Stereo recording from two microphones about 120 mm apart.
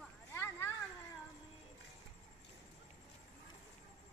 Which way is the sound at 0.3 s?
20° left (ahead or behind).